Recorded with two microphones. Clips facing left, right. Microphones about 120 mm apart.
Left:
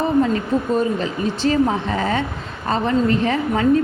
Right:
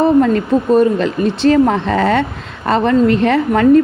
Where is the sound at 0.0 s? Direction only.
65° right (ahead or behind).